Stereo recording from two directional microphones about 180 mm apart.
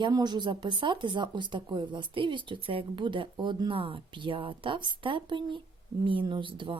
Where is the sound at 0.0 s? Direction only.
25° right (ahead or behind).